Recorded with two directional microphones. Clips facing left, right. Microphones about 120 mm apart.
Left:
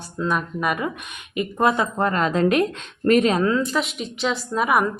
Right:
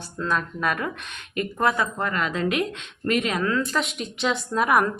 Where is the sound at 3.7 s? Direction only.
Centre (ahead or behind).